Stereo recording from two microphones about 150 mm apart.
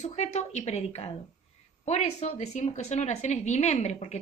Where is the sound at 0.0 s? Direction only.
50° left (ahead or behind).